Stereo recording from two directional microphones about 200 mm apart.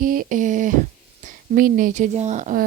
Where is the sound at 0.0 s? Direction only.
45° right (ahead or behind).